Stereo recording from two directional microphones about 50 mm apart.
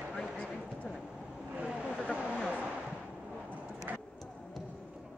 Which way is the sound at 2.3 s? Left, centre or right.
Centre.